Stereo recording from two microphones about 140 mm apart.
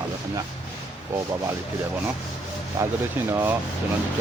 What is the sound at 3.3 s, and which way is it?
Speech, 15° right (ahead or behind).